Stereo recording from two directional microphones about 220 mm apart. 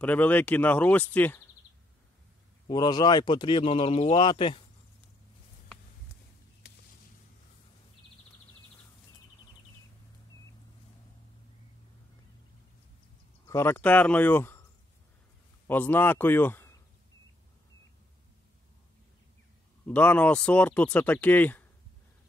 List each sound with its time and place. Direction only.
0.0 s speech: 5° left (ahead or behind)
2.7 s speech: 20° left (ahead or behind)
13.5 s speech: 10° left (ahead or behind)
15.6 s a man's voice: 10° left (ahead or behind)
19.9 s speech: 5° left (ahead or behind)